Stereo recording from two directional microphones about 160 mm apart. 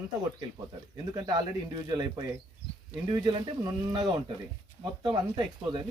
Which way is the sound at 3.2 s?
25° right (ahead or behind).